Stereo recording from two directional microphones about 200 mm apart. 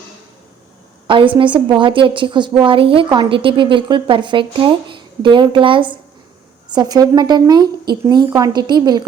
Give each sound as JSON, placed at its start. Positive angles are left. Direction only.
{"t": 1.0, "sound": "a woman's voice", "side_deg": -25}